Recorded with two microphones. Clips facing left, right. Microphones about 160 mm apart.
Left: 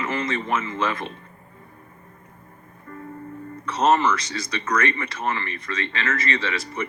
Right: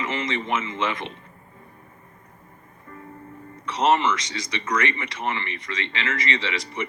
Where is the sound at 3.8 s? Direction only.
20° right (ahead or behind).